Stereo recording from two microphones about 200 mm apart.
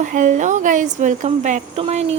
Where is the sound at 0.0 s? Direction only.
40° right (ahead or behind).